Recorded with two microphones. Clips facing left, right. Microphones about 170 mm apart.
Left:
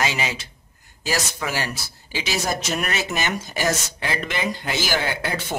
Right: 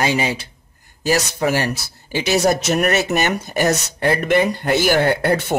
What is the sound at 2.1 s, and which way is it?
Speech, 60° right (ahead or behind).